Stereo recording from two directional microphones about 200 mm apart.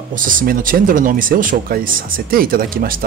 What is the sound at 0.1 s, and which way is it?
Speech, 40° right (ahead or behind).